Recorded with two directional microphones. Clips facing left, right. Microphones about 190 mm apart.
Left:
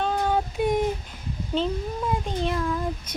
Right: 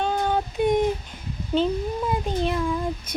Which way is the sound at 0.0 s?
5° left (ahead or behind).